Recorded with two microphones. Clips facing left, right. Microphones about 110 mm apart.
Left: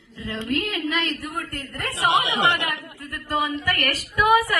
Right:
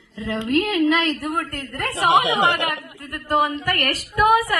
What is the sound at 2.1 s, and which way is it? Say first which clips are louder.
A woman's voice: right 4 dB; 60° right (ahead or behind).